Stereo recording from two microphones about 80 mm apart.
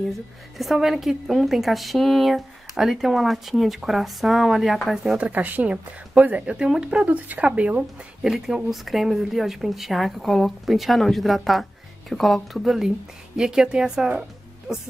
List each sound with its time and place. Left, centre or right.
0.6 s a woman's voice: centre
5.1 s a woman's voice: centre